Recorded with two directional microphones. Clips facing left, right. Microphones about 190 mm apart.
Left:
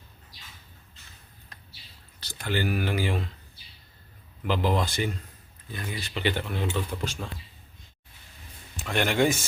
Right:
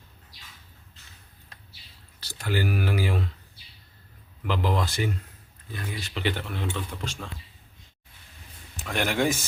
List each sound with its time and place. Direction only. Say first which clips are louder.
2.2 s speech: even; 5° right (ahead or behind)
4.4 s speech: left 1 dB; centre (ahead or behind)
8.8 s speech: left 2 dB; 5° right (ahead or behind)